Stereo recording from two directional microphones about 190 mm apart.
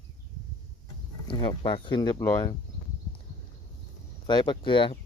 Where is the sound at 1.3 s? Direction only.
25° left (ahead or behind).